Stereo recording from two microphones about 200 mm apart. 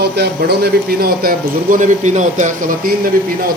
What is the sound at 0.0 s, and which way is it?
Speech, 55° right (ahead or behind).